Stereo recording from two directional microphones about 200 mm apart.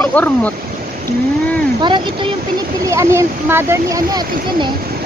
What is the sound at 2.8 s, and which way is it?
Speech, 15° right (ahead or behind).